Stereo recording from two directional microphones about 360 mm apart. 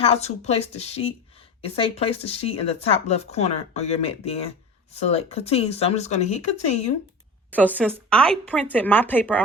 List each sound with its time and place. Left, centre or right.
0.0 s speech: centre
7.5 s speech: centre